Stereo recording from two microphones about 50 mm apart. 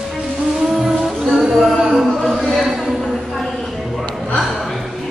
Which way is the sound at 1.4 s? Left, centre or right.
Centre.